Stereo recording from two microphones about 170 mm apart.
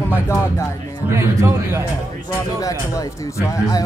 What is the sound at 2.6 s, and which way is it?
Speech, 20° left (ahead or behind).